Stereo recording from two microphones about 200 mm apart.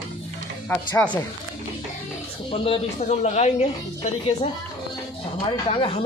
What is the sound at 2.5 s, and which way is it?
A man's voice, 30° left (ahead or behind).